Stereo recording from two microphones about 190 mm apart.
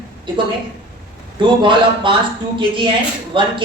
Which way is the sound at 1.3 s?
25° right (ahead or behind).